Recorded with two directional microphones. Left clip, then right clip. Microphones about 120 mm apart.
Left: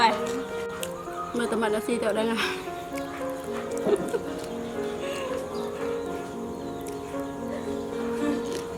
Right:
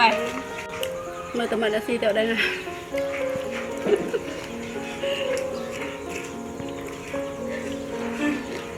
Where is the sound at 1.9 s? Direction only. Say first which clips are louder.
Right 3 dB; 25° left (ahead or behind).